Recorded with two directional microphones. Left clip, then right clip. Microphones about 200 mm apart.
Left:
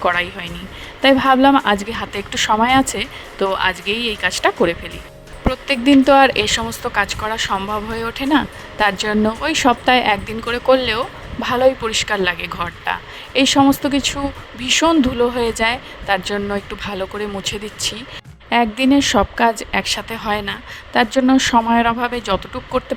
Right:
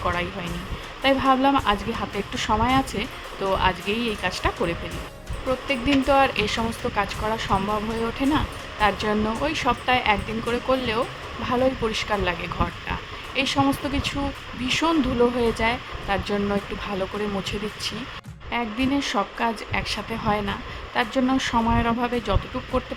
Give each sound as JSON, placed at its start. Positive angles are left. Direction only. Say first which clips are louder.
{"t": 0.0, "sound": "speech", "louder": "left 8 dB", "side_deg": 35}